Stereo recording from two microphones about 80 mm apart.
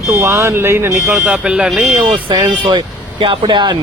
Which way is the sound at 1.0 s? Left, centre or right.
Centre.